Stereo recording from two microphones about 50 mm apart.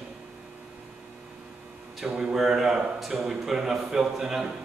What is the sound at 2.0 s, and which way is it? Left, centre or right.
A man's voice, centre.